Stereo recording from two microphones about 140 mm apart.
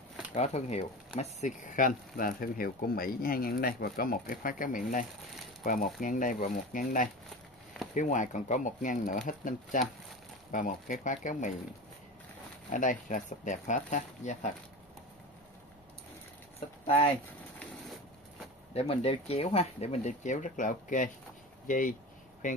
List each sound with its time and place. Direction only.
0.3 s speech: 50° left (ahead or behind)
12.7 s speech: 65° left (ahead or behind)
16.8 s speech: 40° left (ahead or behind)
18.7 s speech: 45° left (ahead or behind); by 22.6 s 65° left (ahead or behind)